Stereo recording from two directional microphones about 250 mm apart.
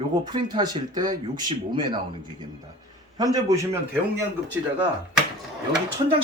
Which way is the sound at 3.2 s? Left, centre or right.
Centre.